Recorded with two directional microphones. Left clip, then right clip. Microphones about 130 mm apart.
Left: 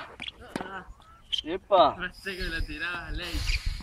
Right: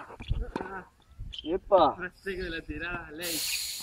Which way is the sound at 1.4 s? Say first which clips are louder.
Left 1 dB; 15° left (ahead or behind).